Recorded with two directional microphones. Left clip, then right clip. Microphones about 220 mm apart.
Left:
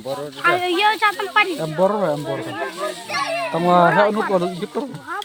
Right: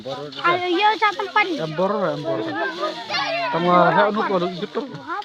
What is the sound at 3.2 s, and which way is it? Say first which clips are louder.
Speech: left 1 dB; 45° left (ahead or behind).